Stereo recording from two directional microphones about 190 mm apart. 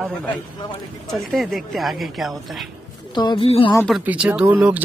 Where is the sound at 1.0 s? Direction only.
Centre (ahead or behind).